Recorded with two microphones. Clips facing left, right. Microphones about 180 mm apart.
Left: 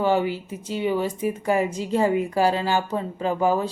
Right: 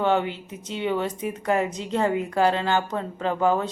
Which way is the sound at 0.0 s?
5° left (ahead or behind).